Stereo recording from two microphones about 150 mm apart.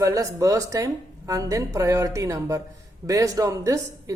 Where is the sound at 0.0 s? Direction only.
20° right (ahead or behind).